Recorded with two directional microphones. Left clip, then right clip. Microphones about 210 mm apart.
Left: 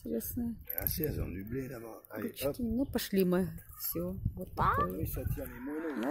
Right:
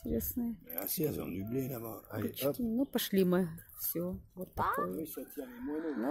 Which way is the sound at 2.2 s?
Centre (ahead or behind).